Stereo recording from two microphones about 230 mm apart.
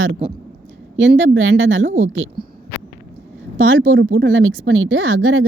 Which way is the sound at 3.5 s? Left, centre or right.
Right.